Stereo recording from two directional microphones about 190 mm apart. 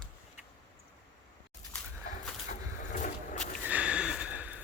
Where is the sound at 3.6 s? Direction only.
5° right (ahead or behind).